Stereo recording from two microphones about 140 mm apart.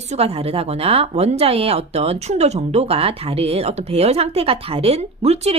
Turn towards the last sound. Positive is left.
turn(degrees=-50)  # may be behind; listen again after turning